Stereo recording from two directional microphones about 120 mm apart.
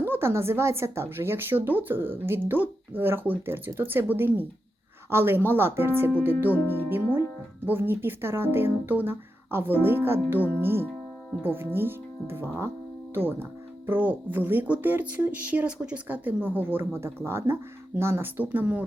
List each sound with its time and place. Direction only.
0.0 s speech: 20° right (ahead or behind)